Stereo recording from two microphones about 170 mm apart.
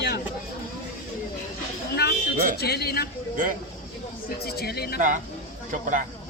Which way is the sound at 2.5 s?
70° left (ahead or behind).